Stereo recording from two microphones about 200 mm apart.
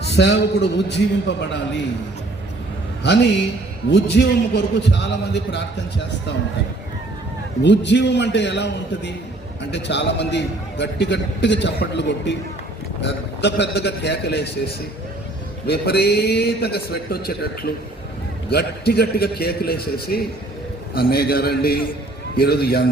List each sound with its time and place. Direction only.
0.1 s a man's voice: 60° left (ahead or behind)
3.8 s a man's voice: 60° left (ahead or behind)
7.6 s a man's voice: 60° left (ahead or behind)
15.6 s a man's voice: 55° left (ahead or behind)